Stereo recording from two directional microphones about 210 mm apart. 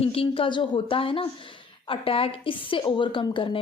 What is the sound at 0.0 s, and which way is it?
A woman's voice, 25° left (ahead or behind).